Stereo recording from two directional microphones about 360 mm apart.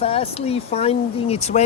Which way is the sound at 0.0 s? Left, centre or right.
Centre.